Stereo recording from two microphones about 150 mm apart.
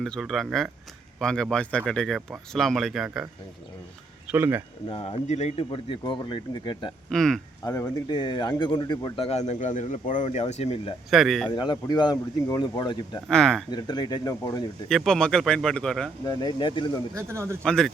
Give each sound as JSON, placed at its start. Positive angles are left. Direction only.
{"t": 0.0, "sound": "speech", "side_deg": 0}
{"t": 4.3, "sound": "speech", "side_deg": -15}
{"t": 4.9, "sound": "speech", "side_deg": 35}
{"t": 7.1, "sound": "speech", "side_deg": 5}
{"t": 7.6, "sound": "speech", "side_deg": 20}
{"t": 9.5, "sound": "speech", "side_deg": 55}
{"t": 11.1, "sound": "speech", "side_deg": 0}
{"t": 11.5, "sound": "speech", "side_deg": 30}
{"t": 13.2, "sound": "speech", "side_deg": 5}
{"t": 13.7, "sound": "speech", "side_deg": 30}
{"t": 14.8, "sound": "speech", "side_deg": 5}
{"t": 16.2, "sound": "speech", "side_deg": 25}
{"t": 17.2, "sound": "a man's voice", "side_deg": -20}
{"t": 17.6, "sound": "speech", "side_deg": 5}